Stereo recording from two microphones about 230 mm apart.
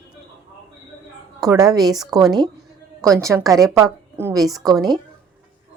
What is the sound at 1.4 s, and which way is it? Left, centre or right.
A woman's voice, centre.